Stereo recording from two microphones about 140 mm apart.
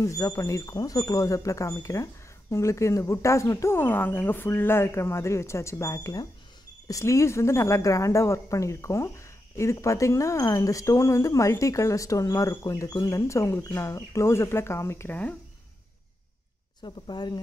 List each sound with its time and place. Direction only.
0.0 s speech: 20° left (ahead or behind)
16.8 s speech: 30° left (ahead or behind)